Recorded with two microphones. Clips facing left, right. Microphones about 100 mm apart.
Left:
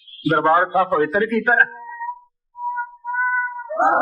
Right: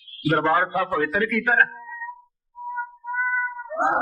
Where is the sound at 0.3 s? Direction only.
25° left (ahead or behind).